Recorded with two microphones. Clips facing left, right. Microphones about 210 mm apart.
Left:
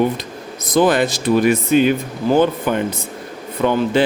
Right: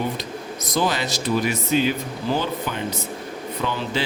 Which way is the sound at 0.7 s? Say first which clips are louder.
Left 9 dB; 55° left (ahead or behind).